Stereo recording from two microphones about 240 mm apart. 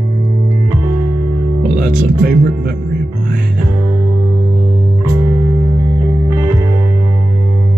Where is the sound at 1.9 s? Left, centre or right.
Right.